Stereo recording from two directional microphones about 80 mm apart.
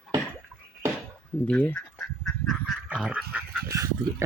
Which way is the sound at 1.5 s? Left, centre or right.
Centre.